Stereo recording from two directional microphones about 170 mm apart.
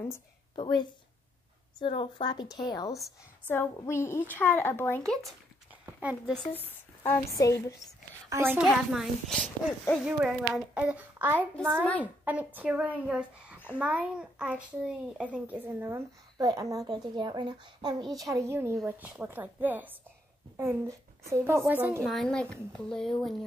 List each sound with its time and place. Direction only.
0.6 s a woman's voice: 25° left (ahead or behind)
3.4 s a woman's voice: 15° left (ahead or behind)
5.9 s speech: 10° right (ahead or behind)
7.0 s a woman's voice: 20° left (ahead or behind)
8.3 s a child's voice: 15° right (ahead or behind)
8.6 s a child's voice: centre (ahead or behind)
10.0 s a child's voice: 5° right (ahead or behind)
11.8 s a woman's voice: 10° left (ahead or behind)
12.5 s a child's voice: 10° right (ahead or behind)
22.0 s a child's voice: centre (ahead or behind)